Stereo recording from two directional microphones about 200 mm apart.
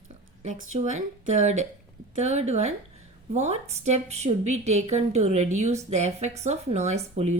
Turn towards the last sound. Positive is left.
turn(degrees=-35)  # may be behind; listen again after turning